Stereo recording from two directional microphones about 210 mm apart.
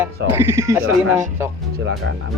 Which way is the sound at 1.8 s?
70° right (ahead or behind).